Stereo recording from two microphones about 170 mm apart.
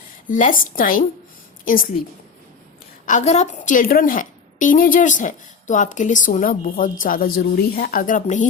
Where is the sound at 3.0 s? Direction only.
45° left (ahead or behind).